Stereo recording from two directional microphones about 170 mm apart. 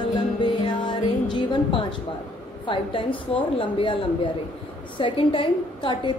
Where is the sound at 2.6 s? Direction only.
30° left (ahead or behind).